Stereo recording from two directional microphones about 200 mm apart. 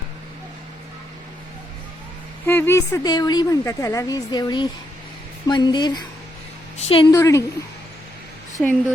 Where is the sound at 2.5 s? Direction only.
10° left (ahead or behind); by 7.1 s 30° left (ahead or behind).